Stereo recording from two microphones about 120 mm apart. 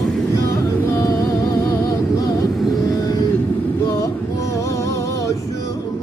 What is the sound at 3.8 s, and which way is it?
Music, 25° left (ahead or behind).